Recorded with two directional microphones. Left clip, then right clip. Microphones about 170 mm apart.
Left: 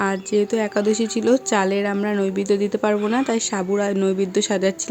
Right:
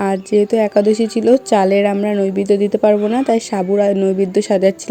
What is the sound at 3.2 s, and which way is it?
Speech, 15° right (ahead or behind).